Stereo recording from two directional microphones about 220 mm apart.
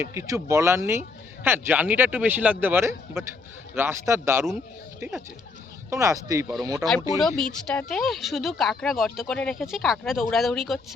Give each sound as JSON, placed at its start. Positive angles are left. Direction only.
{"t": 0.0, "sound": "speech", "side_deg": -15}
{"t": 7.2, "sound": "speech", "side_deg": 0}